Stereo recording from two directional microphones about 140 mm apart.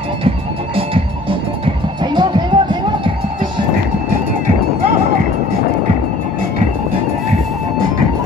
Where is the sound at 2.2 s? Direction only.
35° right (ahead or behind).